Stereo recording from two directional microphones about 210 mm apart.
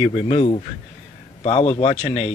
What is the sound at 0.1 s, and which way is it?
Speech, 30° left (ahead or behind).